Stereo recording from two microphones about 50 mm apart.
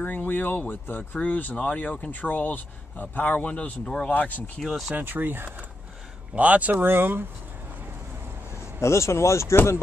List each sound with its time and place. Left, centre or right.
0.0 s speech: left
4.6 s speech: centre
4.9 s speech: right
6.3 s speech: right
6.8 s speech: right
8.8 s speech: left